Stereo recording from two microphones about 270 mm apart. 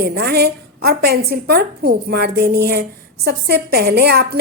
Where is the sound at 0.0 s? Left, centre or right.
Right.